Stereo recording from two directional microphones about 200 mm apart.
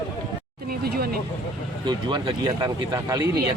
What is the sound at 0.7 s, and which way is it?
Speech, 50° right (ahead or behind).